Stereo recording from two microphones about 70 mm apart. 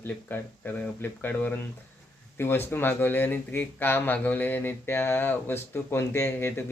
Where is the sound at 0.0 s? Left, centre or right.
Left.